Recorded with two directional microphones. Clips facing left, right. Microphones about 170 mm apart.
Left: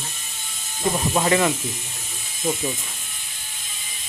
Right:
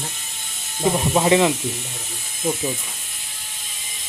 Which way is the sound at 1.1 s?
15° right (ahead or behind).